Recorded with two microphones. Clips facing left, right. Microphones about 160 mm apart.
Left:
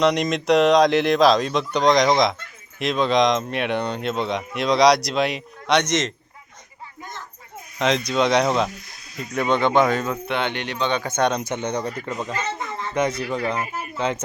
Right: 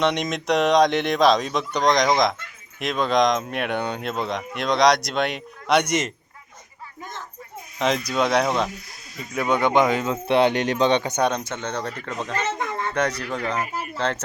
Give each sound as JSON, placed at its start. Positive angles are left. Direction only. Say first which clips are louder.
{"t": 0.0, "sound": "speech", "louder": "left 3 dB", "side_deg": 0}
{"t": 7.8, "sound": "speech", "louder": "left 2 dB", "side_deg": -5}
{"t": 10.2, "sound": "speech", "louder": "right 7 dB", "side_deg": -35}
{"t": 11.2, "sound": "speech", "louder": "left 1 dB", "side_deg": 0}
{"t": 11.4, "sound": "speech", "louder": "left 3 dB", "side_deg": 15}
{"t": 12.5, "sound": "a sound", "louder": "right 3 dB", "side_deg": -55}
{"t": 12.9, "sound": "speech", "louder": "left 5 dB", "side_deg": 10}